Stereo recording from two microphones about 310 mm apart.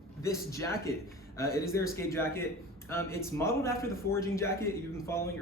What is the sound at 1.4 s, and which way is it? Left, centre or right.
Speech, left.